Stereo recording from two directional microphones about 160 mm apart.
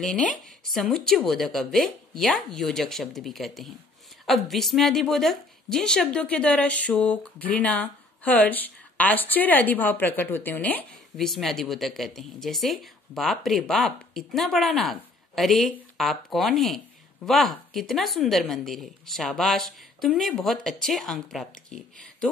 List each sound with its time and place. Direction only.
0.0 s a woman's voice: 5° left (ahead or behind)